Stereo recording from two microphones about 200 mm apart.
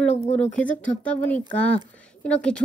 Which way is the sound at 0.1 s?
35° left (ahead or behind).